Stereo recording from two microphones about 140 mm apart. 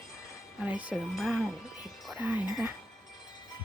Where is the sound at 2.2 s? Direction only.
15° right (ahead or behind).